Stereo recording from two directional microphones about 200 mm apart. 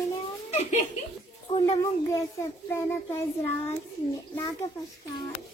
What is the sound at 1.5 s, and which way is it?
Child singing, 15° left (ahead or behind).